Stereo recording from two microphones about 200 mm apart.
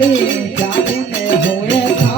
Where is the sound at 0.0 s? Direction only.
65° left (ahead or behind).